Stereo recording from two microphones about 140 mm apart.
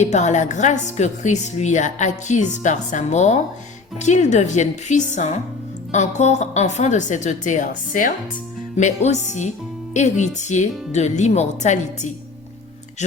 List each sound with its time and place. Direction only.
0.0 s a woman's voice: 55° left (ahead or behind); by 8.1 s 70° left (ahead or behind)
8.7 s a woman's voice: 55° left (ahead or behind)
13.0 s a woman's voice: 55° left (ahead or behind)